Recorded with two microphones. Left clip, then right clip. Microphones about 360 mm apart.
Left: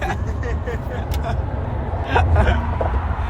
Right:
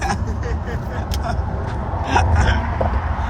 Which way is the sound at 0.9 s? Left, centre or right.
Centre.